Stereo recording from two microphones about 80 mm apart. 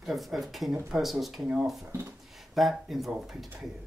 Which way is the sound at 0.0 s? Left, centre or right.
Centre.